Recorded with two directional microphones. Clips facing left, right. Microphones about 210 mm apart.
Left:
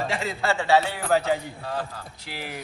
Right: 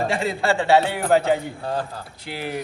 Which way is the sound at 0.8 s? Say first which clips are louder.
Right 5 dB; 55° right (ahead or behind).